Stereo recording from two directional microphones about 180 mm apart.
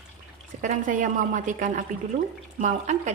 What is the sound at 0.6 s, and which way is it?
A woman's voice, 45° right (ahead or behind).